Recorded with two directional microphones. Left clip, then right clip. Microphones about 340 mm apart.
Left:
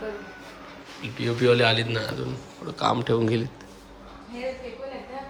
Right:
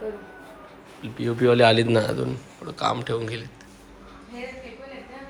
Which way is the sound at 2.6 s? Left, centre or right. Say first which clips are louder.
Left 1 dB; centre.